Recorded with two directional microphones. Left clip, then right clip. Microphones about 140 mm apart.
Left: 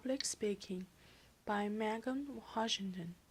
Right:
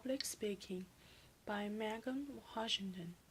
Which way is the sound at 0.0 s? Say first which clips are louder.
Left 3 dB; 25° left (ahead or behind).